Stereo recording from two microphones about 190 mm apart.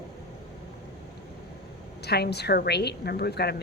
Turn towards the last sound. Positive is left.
turn(degrees=60)  # may be behind; listen again after turning